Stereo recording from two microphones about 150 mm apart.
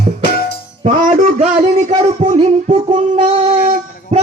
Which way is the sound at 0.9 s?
55° right (ahead or behind).